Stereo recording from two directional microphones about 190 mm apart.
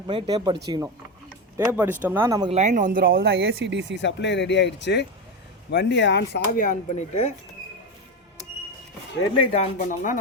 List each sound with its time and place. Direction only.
0.1 s speech: 25° right (ahead or behind)
1.5 s speech: 15° right (ahead or behind)
2.5 s speech: 40° right (ahead or behind)
3.2 s speech: 65° right (ahead or behind)
4.0 s speech: 65° left (ahead or behind); by 7.3 s 35° left (ahead or behind)
9.5 s speech: 40° left (ahead or behind)